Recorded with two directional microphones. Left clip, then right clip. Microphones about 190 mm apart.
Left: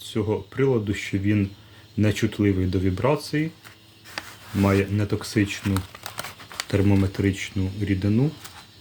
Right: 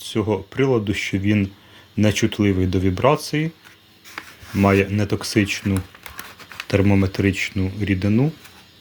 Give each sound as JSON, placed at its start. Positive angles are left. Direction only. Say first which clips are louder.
{"t": 0.0, "sound": "speech", "louder": "right 4 dB", "side_deg": -30}
{"t": 4.5, "sound": "speech", "louder": "right 5 dB", "side_deg": -25}